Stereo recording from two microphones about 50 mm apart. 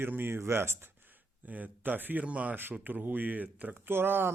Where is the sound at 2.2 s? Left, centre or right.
Right.